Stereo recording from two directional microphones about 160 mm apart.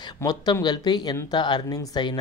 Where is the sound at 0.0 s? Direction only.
25° left (ahead or behind).